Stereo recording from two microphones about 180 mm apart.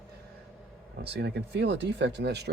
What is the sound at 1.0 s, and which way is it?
Speech, 70° right (ahead or behind).